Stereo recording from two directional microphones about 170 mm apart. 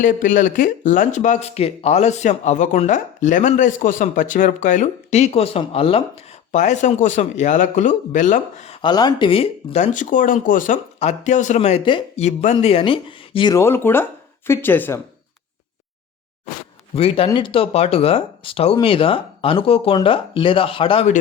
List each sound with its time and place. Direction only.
0.0 s speech: 50° left (ahead or behind)
8.8 s speech: 25° left (ahead or behind)
13.6 s speech: 15° left (ahead or behind)
16.9 s speech: 35° left (ahead or behind)